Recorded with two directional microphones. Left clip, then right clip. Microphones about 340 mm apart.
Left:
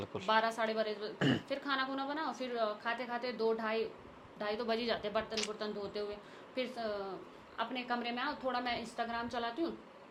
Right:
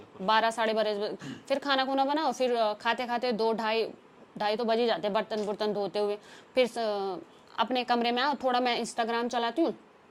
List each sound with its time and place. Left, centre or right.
0.3 s a woman's voice: right
4.4 s a woman's voice: right
5.5 s a woman's voice: right